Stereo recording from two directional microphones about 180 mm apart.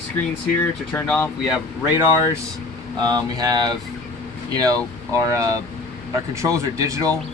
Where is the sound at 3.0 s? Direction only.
20° right (ahead or behind).